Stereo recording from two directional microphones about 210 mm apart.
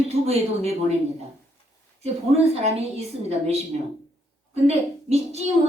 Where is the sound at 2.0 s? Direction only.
30° right (ahead or behind).